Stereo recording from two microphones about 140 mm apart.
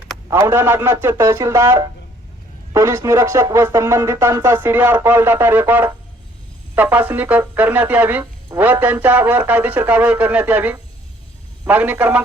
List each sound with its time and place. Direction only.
0.3 s speech: 15° right (ahead or behind)